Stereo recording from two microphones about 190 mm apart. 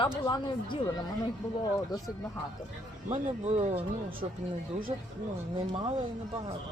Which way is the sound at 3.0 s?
35° right (ahead or behind).